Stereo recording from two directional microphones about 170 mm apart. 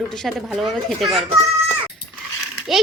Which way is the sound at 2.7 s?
Centre (ahead or behind).